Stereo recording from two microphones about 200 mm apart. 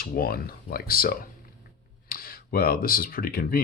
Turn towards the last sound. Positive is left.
turn(degrees=45)  # may be behind; listen again after turning